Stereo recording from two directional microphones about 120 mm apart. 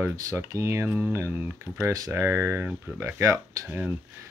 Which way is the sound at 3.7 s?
10° right (ahead or behind).